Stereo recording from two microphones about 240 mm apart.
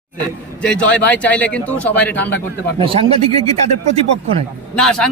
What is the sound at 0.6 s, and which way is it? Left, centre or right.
Speech, centre.